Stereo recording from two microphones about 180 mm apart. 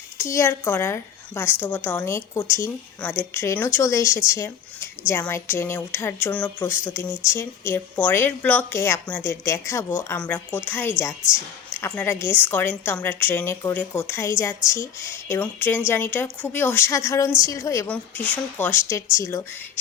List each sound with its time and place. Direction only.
0.2 s a woman's voice: 15° left (ahead or behind)